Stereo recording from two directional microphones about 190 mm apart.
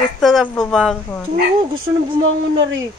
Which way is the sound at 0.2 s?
Centre (ahead or behind).